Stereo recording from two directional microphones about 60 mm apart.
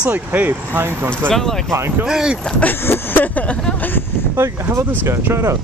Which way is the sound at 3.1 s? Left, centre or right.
Left.